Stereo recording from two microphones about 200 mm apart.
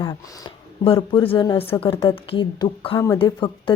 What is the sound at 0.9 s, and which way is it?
A woman's voice, 25° left (ahead or behind).